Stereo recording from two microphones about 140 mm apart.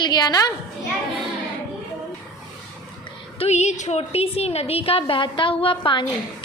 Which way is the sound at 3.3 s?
50° left (ahead or behind).